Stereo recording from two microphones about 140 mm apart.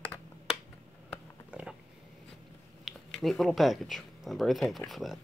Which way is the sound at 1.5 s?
10° right (ahead or behind).